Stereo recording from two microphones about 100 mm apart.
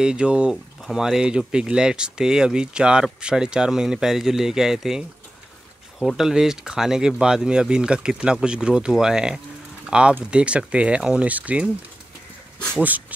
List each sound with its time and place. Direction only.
0.0 s speech: 10° right (ahead or behind)